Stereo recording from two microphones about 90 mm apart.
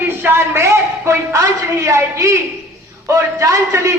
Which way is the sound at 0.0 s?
25° right (ahead or behind).